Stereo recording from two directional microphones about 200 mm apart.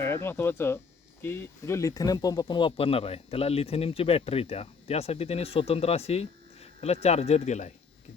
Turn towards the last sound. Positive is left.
turn(degrees=35)  # may be behind; listen again after turning